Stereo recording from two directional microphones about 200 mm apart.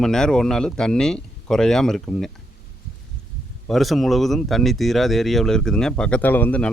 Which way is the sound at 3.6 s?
Centre (ahead or behind).